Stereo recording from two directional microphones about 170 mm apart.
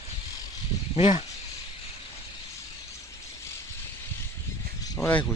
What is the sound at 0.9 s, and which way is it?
Speech, 35° left (ahead or behind).